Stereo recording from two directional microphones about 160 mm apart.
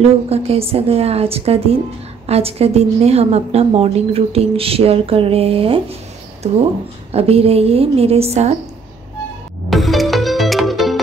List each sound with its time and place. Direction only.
0.3 s a woman's voice: 40° right (ahead or behind)
9.7 s music: centre (ahead or behind)